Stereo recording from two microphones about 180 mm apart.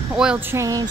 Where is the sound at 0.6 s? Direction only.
20° right (ahead or behind).